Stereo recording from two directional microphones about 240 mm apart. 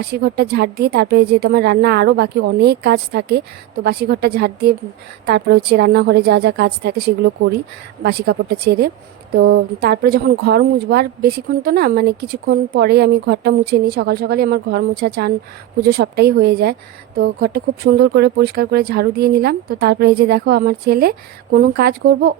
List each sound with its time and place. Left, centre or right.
0.0 s a woman's voice: right